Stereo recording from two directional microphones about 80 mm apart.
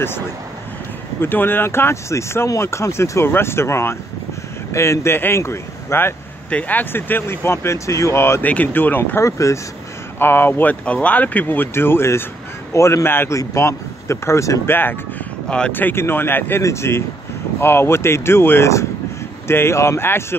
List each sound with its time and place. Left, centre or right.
1.2 s speech: left
6.5 s speech: left
8.5 s speech: left
9.2 s speech: left
10.1 s speech: left
14.7 s speech: left